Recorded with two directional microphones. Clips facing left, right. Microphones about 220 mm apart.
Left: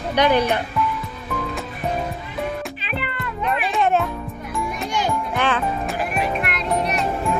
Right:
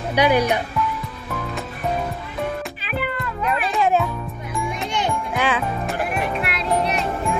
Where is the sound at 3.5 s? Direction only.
Centre (ahead or behind).